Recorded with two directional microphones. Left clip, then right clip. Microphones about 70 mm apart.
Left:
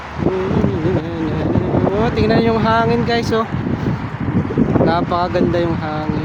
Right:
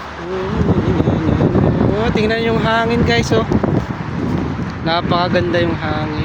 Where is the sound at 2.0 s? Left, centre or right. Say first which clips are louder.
Left 1 dB; left.